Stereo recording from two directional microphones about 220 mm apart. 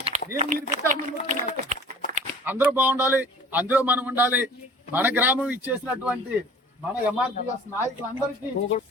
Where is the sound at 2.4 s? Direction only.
10° right (ahead or behind).